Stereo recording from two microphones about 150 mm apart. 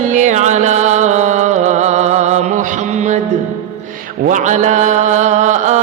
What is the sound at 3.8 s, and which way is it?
Mantra, 60° right (ahead or behind).